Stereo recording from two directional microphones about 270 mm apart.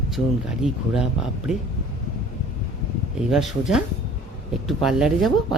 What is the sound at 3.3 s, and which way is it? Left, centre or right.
Speech, centre.